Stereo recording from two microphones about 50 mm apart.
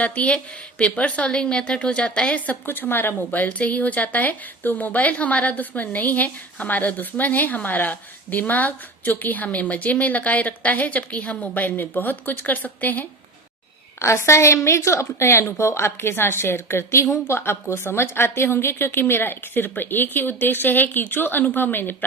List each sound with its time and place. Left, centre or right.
0.0 s a woman's voice: left
2.6 s speech: left
14.0 s a woman's voice: left